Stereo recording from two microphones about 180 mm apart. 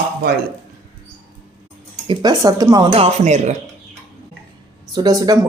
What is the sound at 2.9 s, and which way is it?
Speech, 35° right (ahead or behind).